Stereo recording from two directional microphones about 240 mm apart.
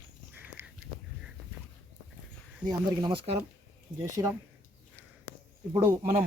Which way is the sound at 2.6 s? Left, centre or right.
Centre.